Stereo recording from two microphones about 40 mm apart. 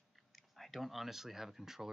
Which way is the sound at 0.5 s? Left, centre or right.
Centre.